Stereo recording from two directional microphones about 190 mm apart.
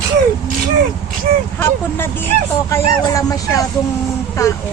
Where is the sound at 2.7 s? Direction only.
15° left (ahead or behind).